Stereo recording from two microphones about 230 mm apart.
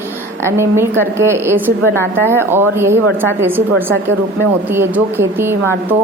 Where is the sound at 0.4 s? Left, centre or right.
Centre.